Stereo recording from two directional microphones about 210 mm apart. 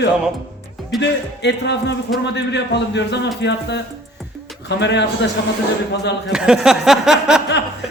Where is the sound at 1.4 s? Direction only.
55° left (ahead or behind).